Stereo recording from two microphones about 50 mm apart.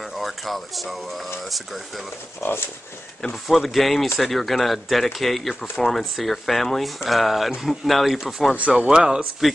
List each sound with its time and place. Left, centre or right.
0.2 s speech: centre
2.4 s speech: left
3.4 s speech: centre